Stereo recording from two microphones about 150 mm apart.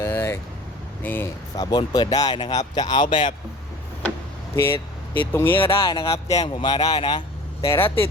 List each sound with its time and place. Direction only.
0.0 s vehicle: 20° left (ahead or behind)
1.0 s speech: 15° left (ahead or behind)
1.7 s speech: 25° left (ahead or behind)
4.5 s vehicle: 15° left (ahead or behind)
5.3 s speech: 15° left (ahead or behind)
5.8 s speech: 30° left (ahead or behind)
7.6 s speech: 20° left (ahead or behind)